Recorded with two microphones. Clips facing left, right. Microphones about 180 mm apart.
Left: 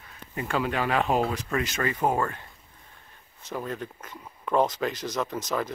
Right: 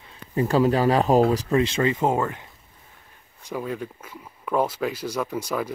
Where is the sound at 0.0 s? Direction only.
25° right (ahead or behind).